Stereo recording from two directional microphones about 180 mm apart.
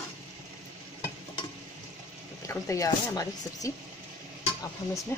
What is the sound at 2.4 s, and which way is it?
Speech, 15° left (ahead or behind).